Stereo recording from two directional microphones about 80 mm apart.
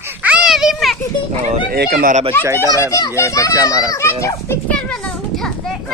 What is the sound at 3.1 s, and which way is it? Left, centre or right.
A child's voice, left.